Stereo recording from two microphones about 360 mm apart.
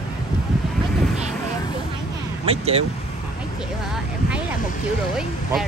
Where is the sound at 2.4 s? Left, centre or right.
Centre.